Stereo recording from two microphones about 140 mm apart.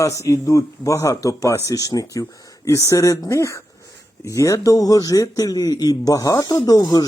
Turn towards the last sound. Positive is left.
turn(degrees=25)  # may be behind; listen again after turning